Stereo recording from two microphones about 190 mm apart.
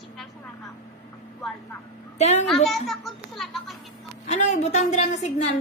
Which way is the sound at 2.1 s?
35° left (ahead or behind).